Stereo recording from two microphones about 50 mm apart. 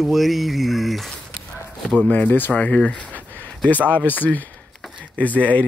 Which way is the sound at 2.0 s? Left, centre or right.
Left.